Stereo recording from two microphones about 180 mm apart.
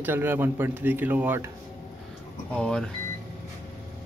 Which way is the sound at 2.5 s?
5° left (ahead or behind).